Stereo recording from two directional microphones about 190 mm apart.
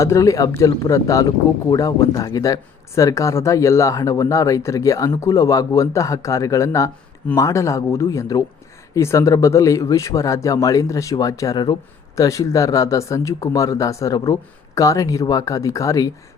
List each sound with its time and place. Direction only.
0.0 s speech: 15° left (ahead or behind)